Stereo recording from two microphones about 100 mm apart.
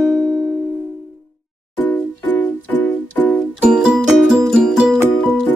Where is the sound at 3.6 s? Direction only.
10° right (ahead or behind).